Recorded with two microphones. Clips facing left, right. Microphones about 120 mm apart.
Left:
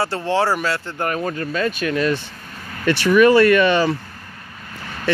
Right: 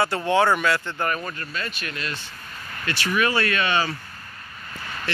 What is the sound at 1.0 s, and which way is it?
Speech, 70° left (ahead or behind).